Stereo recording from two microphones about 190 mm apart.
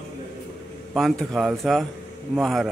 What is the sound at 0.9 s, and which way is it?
A man's voice, centre (ahead or behind).